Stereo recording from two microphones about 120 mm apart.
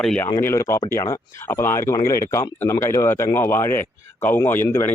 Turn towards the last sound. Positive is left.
turn(degrees=20)  # may be behind; listen again after turning